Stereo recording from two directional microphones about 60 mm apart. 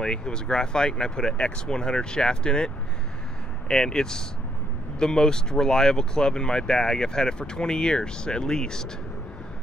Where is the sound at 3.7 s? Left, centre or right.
Centre.